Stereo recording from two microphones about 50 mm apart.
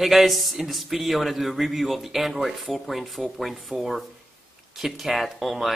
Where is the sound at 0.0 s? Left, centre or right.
Centre.